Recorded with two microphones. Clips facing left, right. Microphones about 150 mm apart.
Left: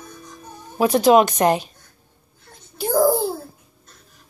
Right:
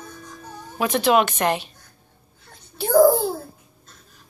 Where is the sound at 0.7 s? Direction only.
40° left (ahead or behind).